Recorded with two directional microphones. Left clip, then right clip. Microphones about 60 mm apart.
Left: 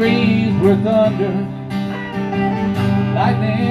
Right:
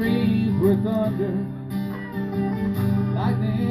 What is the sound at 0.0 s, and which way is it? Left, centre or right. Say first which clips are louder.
Music: left 8 dB; right.